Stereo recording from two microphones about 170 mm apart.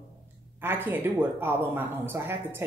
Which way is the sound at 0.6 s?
10° right (ahead or behind).